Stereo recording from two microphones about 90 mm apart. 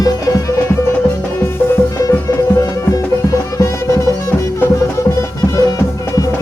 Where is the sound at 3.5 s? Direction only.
35° left (ahead or behind).